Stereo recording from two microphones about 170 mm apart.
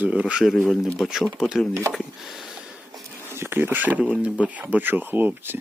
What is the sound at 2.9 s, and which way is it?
Speech, 15° right (ahead or behind).